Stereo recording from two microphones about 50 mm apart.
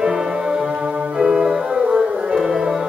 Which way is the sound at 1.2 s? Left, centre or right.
Centre.